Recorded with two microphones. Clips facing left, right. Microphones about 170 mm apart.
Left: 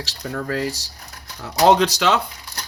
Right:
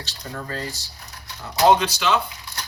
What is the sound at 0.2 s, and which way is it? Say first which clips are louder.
Speech: left 7 dB; 65° left (ahead or behind).